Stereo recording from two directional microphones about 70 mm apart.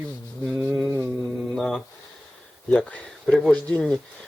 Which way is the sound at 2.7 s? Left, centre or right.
Centre.